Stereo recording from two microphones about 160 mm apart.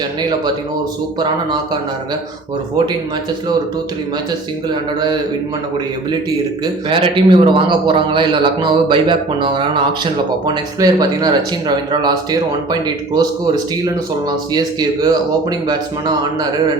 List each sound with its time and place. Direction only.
4.7 s a man's voice: 25° right (ahead or behind)
6.9 s a man's voice: 30° right (ahead or behind)
14.5 s a man's voice: 25° right (ahead or behind)